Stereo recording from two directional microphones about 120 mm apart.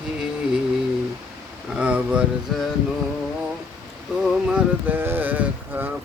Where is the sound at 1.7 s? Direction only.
10° right (ahead or behind).